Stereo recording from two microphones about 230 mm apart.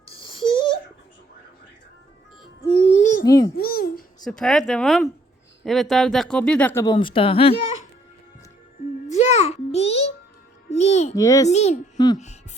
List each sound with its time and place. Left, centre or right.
0.1 s a sound: left
2.6 s music: left
3.2 s a child's voice: centre
3.6 s babbling: left
4.2 s speech: centre
6.9 s speech: left
9.0 s a sound: left
11.1 s a child's voice: centre
11.4 s speech: left
12.1 s music: left